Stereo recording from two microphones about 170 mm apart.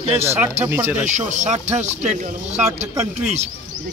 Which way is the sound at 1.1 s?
45° right (ahead or behind).